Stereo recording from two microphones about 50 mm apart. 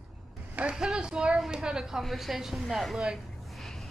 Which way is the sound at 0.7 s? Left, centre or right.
Centre.